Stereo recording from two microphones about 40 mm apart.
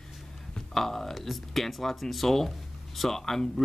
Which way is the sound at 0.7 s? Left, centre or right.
Centre.